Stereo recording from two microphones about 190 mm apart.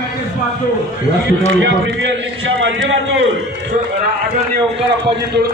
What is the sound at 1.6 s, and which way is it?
A man's voice, 70° right (ahead or behind).